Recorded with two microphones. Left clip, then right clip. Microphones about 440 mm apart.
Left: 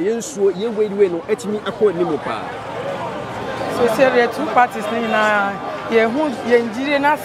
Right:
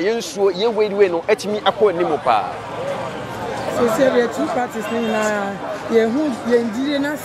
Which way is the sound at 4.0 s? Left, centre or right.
Left.